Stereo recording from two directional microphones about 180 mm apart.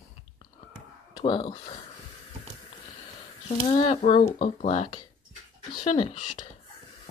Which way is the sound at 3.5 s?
30° left (ahead or behind).